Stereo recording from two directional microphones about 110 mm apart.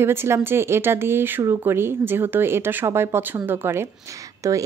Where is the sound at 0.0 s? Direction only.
20° right (ahead or behind).